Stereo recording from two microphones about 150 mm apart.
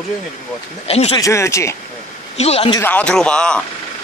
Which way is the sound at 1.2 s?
20° left (ahead or behind).